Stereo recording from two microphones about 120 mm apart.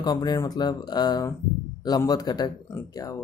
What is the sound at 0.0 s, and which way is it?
Speech, 35° left (ahead or behind).